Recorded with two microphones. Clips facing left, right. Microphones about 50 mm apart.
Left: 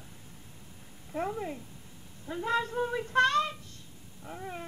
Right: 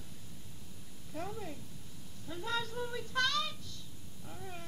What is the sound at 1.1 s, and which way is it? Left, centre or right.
Speech, left.